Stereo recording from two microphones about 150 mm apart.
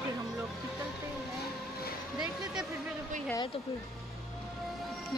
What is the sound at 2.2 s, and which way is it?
Speech, 5° right (ahead or behind).